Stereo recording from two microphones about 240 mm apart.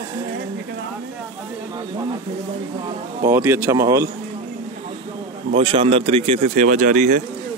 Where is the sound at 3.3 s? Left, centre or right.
Centre.